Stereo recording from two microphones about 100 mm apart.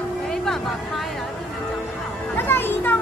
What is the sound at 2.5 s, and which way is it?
Music, 20° left (ahead or behind).